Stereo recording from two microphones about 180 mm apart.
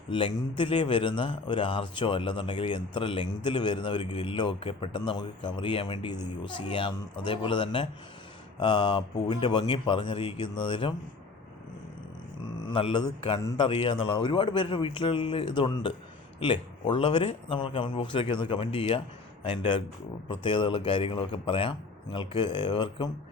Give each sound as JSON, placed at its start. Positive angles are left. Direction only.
{"t": 0.1, "sound": "speech", "side_deg": 25}
{"t": 12.7, "sound": "a man's voice", "side_deg": 30}